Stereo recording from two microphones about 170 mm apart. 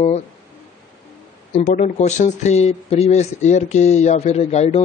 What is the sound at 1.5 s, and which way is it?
Speech, 45° left (ahead or behind).